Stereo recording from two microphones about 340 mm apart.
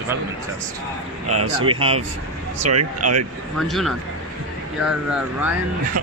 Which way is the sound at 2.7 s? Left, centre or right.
Right.